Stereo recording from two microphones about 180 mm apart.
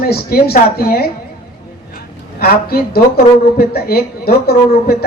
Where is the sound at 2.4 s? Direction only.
60° left (ahead or behind).